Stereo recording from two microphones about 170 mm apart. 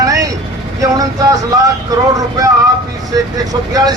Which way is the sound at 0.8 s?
20° right (ahead or behind).